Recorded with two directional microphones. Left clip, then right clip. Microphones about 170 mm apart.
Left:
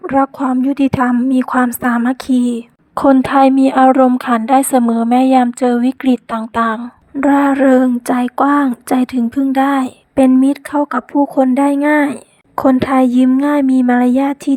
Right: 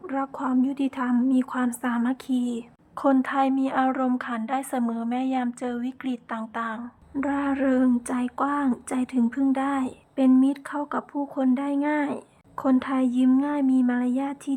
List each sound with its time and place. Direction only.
0.0 s a woman's voice: 40° left (ahead or behind)
7.2 s a woman's voice: 40° left (ahead or behind)